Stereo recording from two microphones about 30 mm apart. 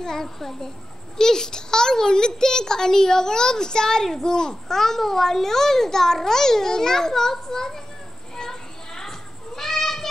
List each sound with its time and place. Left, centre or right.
0.0 s a child's voice: centre
8.4 s children playing: centre
9.6 s cat: centre